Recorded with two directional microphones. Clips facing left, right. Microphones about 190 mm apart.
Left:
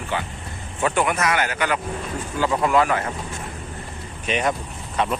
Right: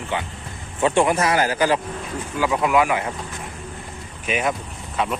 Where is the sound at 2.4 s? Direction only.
10° right (ahead or behind).